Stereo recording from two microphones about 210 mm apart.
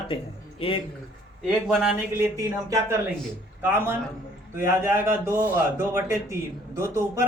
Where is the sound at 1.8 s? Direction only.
15° right (ahead or behind).